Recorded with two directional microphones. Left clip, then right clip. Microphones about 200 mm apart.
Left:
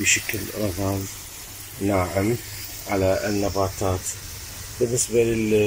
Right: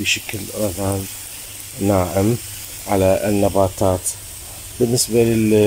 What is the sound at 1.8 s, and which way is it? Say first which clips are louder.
Speech: right 5 dB; 15° right (ahead or behind).